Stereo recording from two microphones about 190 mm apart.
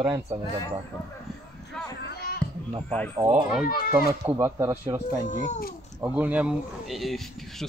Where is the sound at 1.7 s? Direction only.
5° left (ahead or behind).